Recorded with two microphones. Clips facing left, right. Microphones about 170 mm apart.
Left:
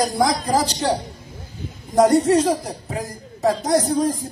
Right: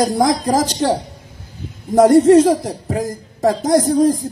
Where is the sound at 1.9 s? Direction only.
50° right (ahead or behind).